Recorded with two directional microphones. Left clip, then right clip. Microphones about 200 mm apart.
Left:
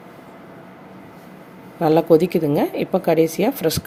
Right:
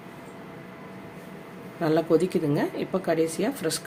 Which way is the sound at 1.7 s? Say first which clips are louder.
Left 8 dB; 30° left (ahead or behind).